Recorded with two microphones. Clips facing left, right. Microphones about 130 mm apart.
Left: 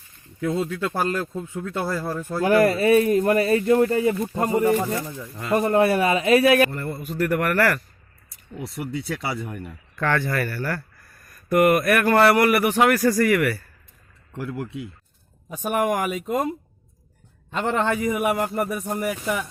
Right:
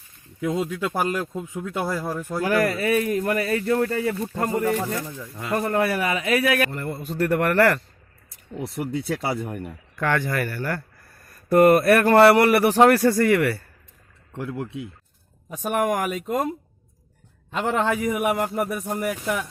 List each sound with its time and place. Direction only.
0.4 s speech: 15° right (ahead or behind)
2.4 s speech: 25° left (ahead or behind)
6.7 s speech: 20° right (ahead or behind)
8.8 s speech: 45° right (ahead or behind)
9.6 s speech: 15° right (ahead or behind)
15.4 s a man's voice: centre (ahead or behind)